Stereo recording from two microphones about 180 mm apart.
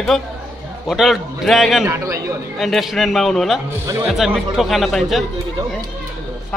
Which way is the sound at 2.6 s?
Centre (ahead or behind).